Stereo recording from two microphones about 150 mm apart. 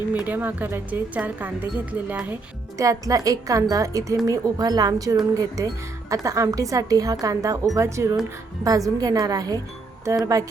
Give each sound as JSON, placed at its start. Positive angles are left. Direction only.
{"t": 0.1, "sound": "speech", "side_deg": -10}
{"t": 2.7, "sound": "speech", "side_deg": -20}